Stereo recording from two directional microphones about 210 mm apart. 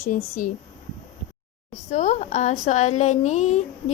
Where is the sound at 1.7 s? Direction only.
35° left (ahead or behind).